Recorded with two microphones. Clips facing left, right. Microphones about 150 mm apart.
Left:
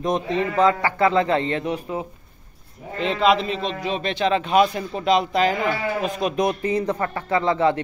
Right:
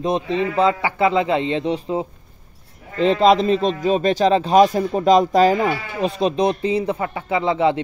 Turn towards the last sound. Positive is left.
turn(degrees=-15)  # may be behind; listen again after turning